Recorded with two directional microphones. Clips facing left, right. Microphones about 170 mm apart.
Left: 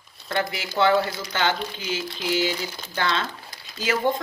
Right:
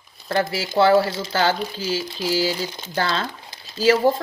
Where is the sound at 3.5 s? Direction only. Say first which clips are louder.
Right 14 dB; 30° right (ahead or behind).